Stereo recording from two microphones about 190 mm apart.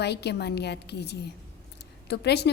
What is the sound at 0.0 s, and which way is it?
A woman's voice, 60° left (ahead or behind).